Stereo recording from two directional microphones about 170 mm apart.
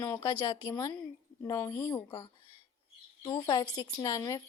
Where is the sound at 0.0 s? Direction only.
20° left (ahead or behind).